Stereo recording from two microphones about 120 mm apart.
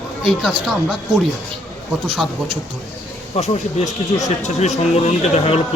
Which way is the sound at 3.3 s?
65° left (ahead or behind).